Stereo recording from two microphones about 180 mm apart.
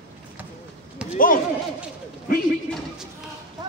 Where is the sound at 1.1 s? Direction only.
50° left (ahead or behind).